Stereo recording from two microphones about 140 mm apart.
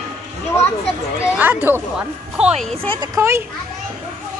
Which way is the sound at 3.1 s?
20° right (ahead or behind).